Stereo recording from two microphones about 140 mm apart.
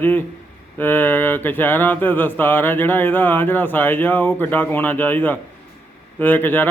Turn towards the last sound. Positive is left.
turn(degrees=15)  # may be behind; listen again after turning